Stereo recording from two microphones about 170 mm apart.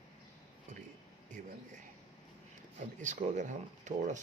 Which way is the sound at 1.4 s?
55° right (ahead or behind).